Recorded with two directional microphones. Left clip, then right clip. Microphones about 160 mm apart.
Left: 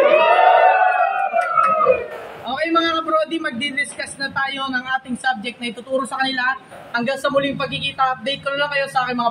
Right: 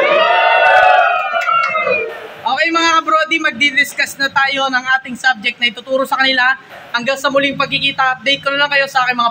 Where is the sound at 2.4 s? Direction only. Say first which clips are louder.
Right 6 dB; 10° right (ahead or behind).